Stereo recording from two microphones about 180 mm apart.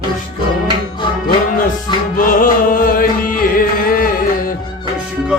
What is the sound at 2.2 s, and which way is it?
Music, 50° left (ahead or behind).